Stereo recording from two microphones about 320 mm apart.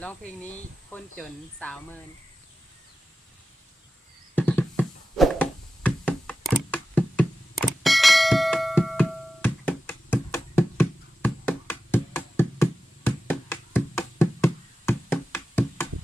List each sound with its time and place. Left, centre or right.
0.9 s speech: centre
4.4 s a sound: centre
13.1 s music: centre